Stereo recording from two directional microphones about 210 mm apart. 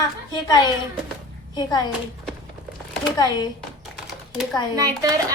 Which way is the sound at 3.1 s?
20° left (ahead or behind).